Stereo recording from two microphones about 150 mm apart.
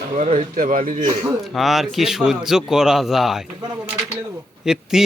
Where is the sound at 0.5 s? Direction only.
65° right (ahead or behind).